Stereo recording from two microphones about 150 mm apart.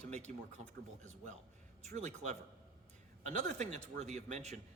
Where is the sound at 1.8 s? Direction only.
50° right (ahead or behind).